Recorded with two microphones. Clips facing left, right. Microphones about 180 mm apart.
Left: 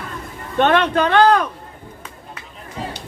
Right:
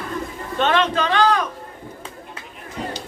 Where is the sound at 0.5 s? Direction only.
60° left (ahead or behind).